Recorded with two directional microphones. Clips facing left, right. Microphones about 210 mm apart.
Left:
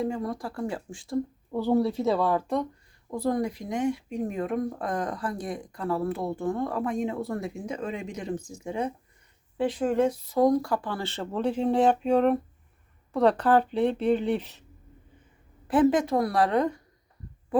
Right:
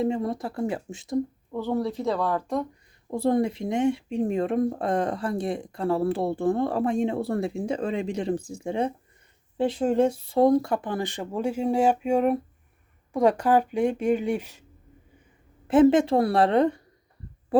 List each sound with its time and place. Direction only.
0.0 s speech: 25° right (ahead or behind)
1.5 s speech: 10° left (ahead or behind)
3.1 s speech: 25° right (ahead or behind); by 14.6 s 10° right (ahead or behind)
15.6 s speech: 25° right (ahead or behind)